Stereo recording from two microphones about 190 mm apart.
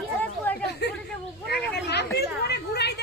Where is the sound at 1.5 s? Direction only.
60° left (ahead or behind).